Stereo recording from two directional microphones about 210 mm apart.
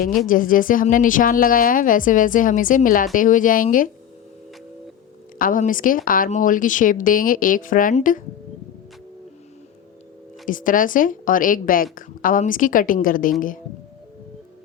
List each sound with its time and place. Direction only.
0.3 s a woman's voice: 40° left (ahead or behind)
5.4 s a woman's voice: 40° left (ahead or behind)
10.4 s a woman's voice: 40° left (ahead or behind)